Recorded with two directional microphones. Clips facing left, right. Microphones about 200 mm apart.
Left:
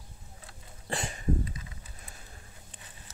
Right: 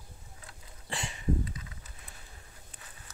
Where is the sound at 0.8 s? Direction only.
45° left (ahead or behind).